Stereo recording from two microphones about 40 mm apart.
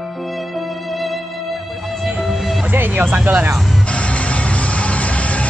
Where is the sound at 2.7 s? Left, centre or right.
Right.